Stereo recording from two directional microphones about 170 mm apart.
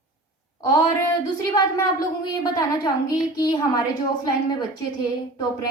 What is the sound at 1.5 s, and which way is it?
A woman's voice, 20° left (ahead or behind).